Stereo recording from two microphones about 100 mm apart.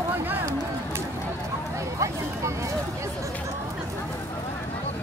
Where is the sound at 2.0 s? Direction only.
30° right (ahead or behind).